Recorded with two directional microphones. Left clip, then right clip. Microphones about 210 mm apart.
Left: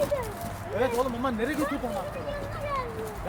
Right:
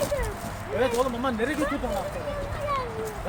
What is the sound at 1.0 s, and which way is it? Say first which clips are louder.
Speech: right 2 dB; 10° left (ahead or behind).